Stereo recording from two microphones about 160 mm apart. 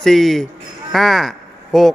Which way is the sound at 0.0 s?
Centre (ahead or behind).